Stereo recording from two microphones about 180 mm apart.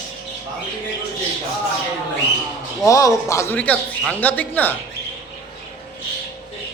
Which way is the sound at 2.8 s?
15° left (ahead or behind).